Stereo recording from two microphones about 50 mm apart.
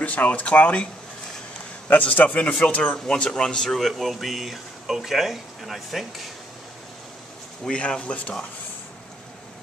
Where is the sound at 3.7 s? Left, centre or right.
Centre.